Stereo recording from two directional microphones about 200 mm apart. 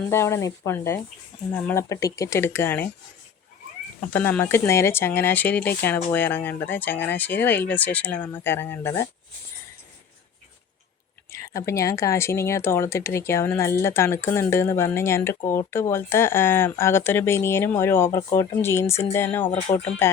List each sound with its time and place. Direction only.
0.1 s speech: 15° left (ahead or behind)
4.0 s speech: 10° left (ahead or behind)
11.3 s speech: 15° left (ahead or behind)
19.5 s speech: 30° left (ahead or behind)
20.0 s speech: 10° left (ahead or behind)